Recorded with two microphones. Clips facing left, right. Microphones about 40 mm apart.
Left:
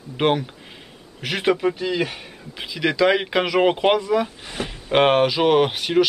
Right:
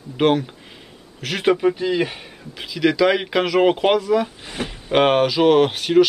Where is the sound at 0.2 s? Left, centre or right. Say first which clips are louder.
Right 2 dB; centre.